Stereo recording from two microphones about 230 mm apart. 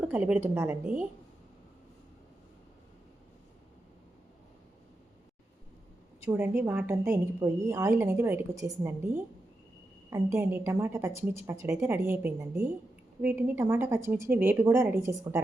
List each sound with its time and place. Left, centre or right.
0.0 s a woman's voice: centre
6.2 s a woman's voice: centre